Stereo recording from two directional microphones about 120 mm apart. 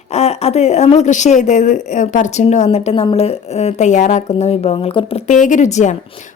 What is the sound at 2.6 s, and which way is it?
Speech, 55° left (ahead or behind).